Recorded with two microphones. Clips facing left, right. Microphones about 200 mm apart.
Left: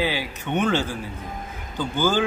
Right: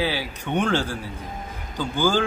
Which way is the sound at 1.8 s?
10° right (ahead or behind).